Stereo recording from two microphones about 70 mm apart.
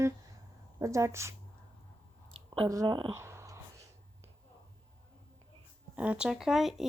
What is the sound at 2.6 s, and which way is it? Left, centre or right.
Speech, right.